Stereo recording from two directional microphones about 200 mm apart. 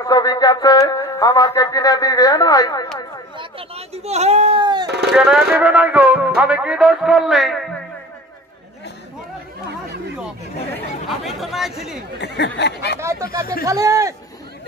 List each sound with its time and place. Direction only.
0.0 s speech: 20° left (ahead or behind)
3.3 s speech: 30° right (ahead or behind)
4.8 s speech: 55° right (ahead or behind)
5.1 s a man's voice: 5° right (ahead or behind)
11.1 s chatter: centre (ahead or behind)
12.2 s speech: 55° left (ahead or behind)
13.0 s speech: 15° right (ahead or behind)